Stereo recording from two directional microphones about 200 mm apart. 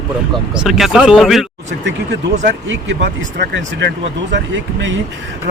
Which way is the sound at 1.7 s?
60° right (ahead or behind).